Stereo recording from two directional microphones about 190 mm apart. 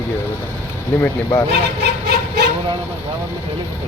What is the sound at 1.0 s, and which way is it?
Speech, 20° left (ahead or behind).